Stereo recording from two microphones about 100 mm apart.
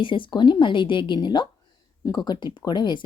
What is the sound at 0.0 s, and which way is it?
Speech, 55° left (ahead or behind).